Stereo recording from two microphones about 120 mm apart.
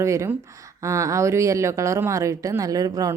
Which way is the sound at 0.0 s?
25° right (ahead or behind).